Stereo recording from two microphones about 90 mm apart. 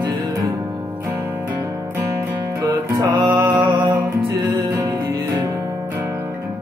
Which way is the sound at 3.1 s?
60° right (ahead or behind).